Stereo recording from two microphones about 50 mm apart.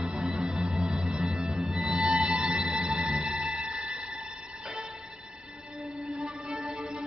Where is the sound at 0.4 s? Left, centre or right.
Centre.